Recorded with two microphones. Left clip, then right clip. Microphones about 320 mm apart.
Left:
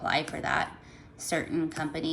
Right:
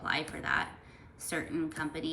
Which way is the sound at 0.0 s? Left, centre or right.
Centre.